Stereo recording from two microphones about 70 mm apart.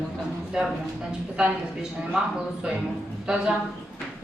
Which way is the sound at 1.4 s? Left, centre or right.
Centre.